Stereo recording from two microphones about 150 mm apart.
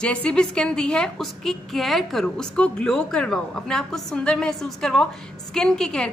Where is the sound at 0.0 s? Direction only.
5° left (ahead or behind).